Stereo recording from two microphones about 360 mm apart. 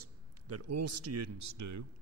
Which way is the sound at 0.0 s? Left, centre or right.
Right.